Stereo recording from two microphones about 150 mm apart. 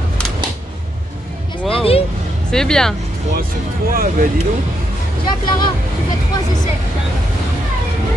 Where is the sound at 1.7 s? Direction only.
40° left (ahead or behind).